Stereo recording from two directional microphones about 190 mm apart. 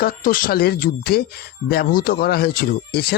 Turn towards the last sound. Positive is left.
turn(degrees=55)  # may be behind; listen again after turning